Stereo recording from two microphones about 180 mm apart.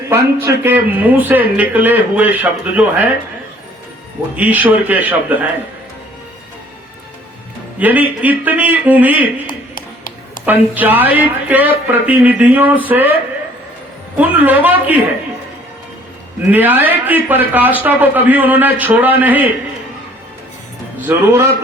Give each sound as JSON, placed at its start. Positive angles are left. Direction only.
{"t": 0.1, "sound": "speech", "side_deg": -10}
{"t": 4.4, "sound": "speech", "side_deg": -10}
{"t": 7.8, "sound": "speech", "side_deg": -10}
{"t": 9.5, "sound": "a sound", "side_deg": 50}
{"t": 10.4, "sound": "speech", "side_deg": -10}
{"t": 14.2, "sound": "speech", "side_deg": -10}
{"t": 16.5, "sound": "speech", "side_deg": -10}
{"t": 21.1, "sound": "speech", "side_deg": -10}